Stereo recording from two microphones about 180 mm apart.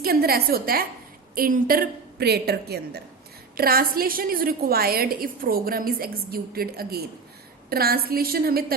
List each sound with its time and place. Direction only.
0.0 s a woman's voice: 60° right (ahead or behind)